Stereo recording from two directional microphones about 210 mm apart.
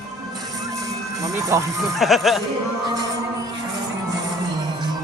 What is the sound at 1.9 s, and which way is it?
Speech, centre (ahead or behind).